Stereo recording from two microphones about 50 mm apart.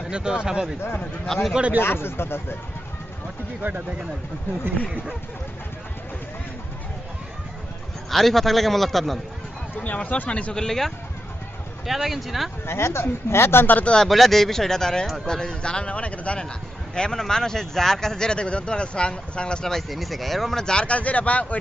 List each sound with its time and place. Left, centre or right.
0.1 s speech: centre
1.3 s speech: centre
1.8 s speech: left
3.6 s speech: right
8.1 s a man's voice: centre
9.7 s speech: left; by 10.9 s centre
11.9 s a man's voice: centre
12.6 s speech: left
13.8 s speech: centre
14.1 s speech: centre
15.0 s a man's voice: centre
15.3 s speech: centre
19.7 s speech: centre; by 21.6 s left